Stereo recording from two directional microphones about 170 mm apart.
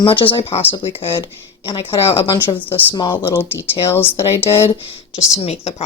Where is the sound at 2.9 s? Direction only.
25° left (ahead or behind).